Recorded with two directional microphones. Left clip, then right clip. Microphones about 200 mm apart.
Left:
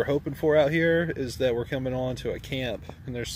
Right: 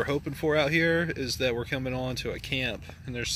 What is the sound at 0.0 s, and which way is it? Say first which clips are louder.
Speech: left 3 dB; 20° left (ahead or behind).